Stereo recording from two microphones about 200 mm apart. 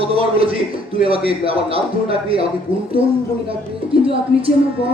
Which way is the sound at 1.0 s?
30° right (ahead or behind).